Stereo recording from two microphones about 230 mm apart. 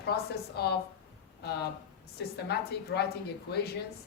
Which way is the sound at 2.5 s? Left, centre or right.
Left.